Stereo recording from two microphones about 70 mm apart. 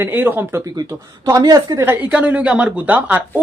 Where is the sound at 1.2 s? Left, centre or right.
Right.